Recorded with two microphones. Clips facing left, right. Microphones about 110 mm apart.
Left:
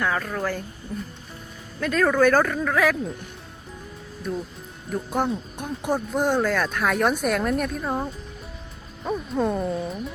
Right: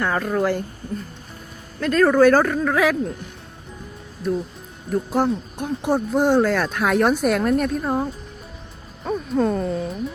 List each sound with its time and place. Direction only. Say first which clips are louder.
0.0 s speech: right 5 dB; 10° right (ahead or behind)
0.8 s speech: right 4 dB; 55° right (ahead or behind)
1.8 s speech: right 5 dB; centre (ahead or behind)
4.9 s speech: right 4 dB; 5° right (ahead or behind); by 9.9 s 10° left (ahead or behind)